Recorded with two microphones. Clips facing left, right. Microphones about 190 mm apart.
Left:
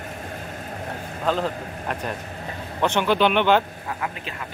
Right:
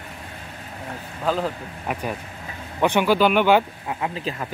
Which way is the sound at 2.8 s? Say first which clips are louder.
Right 2 dB; 10° right (ahead or behind).